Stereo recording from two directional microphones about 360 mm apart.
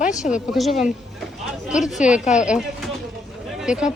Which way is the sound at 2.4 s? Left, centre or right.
Centre.